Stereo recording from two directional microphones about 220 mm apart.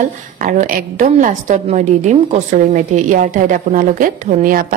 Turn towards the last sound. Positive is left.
turn(degrees=-35)  # may be behind; listen again after turning